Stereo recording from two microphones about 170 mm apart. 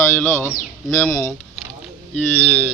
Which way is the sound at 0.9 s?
20° left (ahead or behind).